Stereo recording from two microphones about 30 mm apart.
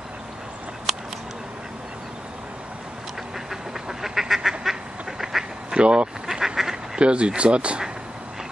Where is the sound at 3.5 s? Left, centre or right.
Centre.